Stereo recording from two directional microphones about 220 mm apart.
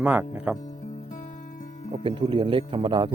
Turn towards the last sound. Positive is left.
turn(degrees=-25)  # may be behind; listen again after turning